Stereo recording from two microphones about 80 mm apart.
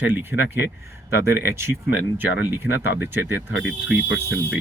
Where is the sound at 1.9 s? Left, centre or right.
Right.